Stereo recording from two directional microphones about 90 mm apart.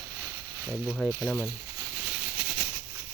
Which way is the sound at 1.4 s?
30° right (ahead or behind).